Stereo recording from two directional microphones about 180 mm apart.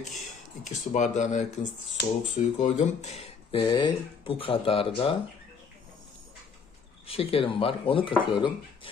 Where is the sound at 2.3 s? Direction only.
45° left (ahead or behind).